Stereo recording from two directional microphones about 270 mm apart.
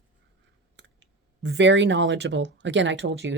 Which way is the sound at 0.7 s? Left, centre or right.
Right.